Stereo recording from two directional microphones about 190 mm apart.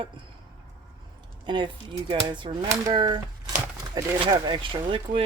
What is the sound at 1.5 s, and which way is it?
Speech, 25° right (ahead or behind).